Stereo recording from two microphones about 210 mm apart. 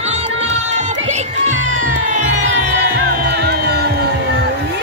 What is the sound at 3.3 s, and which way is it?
Music, 50° right (ahead or behind).